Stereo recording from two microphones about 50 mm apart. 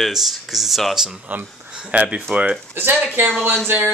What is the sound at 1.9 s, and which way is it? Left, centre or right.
Speech, right.